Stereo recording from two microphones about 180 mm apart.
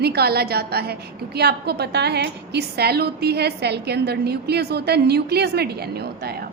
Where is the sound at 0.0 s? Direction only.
60° right (ahead or behind).